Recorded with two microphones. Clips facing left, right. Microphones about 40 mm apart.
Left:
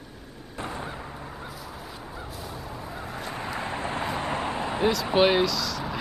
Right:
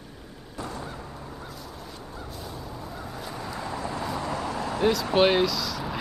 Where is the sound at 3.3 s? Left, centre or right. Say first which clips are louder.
Left 2 dB; left.